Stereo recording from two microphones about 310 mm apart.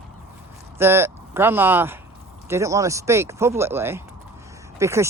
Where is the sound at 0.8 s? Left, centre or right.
Centre.